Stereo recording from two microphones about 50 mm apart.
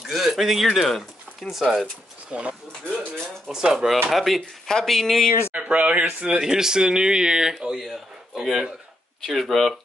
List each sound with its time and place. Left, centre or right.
0.0 s speech: centre
2.3 s speech: right
3.5 s speech: centre
5.5 s speech: right
6.2 s speech: centre